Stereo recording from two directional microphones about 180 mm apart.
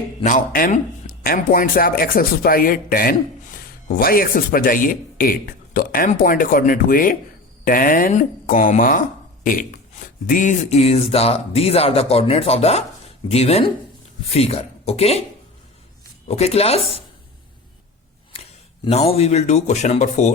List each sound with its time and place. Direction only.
0.2 s speech: 45° left (ahead or behind)
16.3 s speech: 35° left (ahead or behind)
18.9 s speech: 35° left (ahead or behind)